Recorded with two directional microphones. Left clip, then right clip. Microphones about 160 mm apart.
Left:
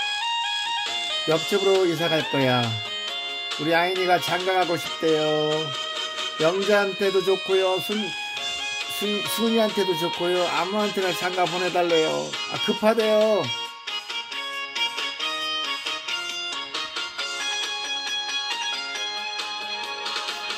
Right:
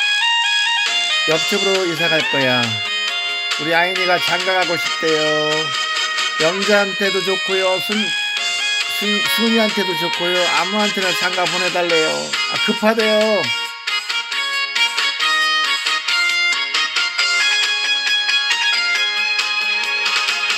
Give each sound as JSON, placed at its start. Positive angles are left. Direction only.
{"t": 1.3, "sound": "speech", "side_deg": -15}
{"t": 3.7, "sound": "speech", "side_deg": -10}
{"t": 6.4, "sound": "speech", "side_deg": -10}
{"t": 9.4, "sound": "speech", "side_deg": -10}
{"t": 12.6, "sound": "speech", "side_deg": -10}
{"t": 14.8, "sound": "music", "side_deg": -5}
{"t": 17.2, "sound": "music", "side_deg": -10}